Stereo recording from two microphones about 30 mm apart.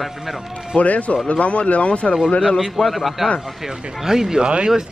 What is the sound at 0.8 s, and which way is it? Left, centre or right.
Speech, left.